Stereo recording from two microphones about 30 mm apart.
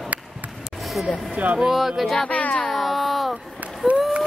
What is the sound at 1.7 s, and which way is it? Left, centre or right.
Speech, centre.